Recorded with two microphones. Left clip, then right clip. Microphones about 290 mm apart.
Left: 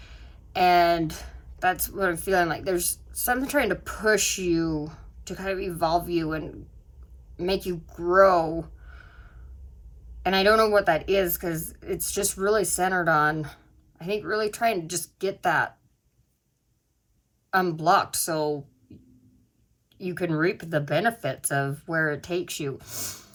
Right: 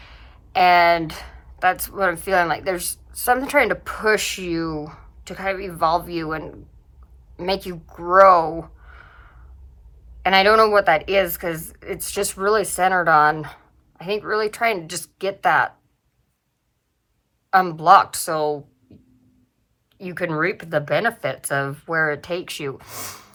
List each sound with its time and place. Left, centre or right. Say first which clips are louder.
0.0 s a sound: right 5 dB; centre
0.8 s a woman's voice: right 5 dB; centre
2.1 s a woman's voice: right 5 dB; centre
10.2 s a woman's voice: right 6 dB; centre
17.5 s a woman's voice: right 8 dB; centre
20.0 s a woman's voice: right 4 dB; centre